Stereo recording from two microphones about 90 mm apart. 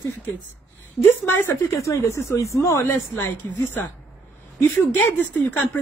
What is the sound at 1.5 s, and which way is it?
A woman's voice, 35° left (ahead or behind).